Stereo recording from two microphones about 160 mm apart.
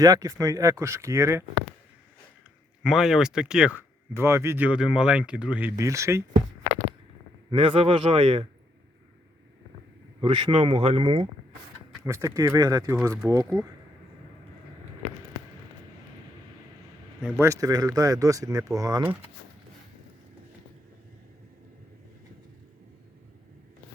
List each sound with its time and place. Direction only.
0.0 s speech: 20° right (ahead or behind)
2.8 s speech: centre (ahead or behind); by 6.2 s 20° right (ahead or behind)
7.5 s speech: 35° right (ahead or behind)
10.2 s speech: 30° right (ahead or behind)
12.0 s speech: 15° right (ahead or behind)
17.3 s speech: 20° right (ahead or behind)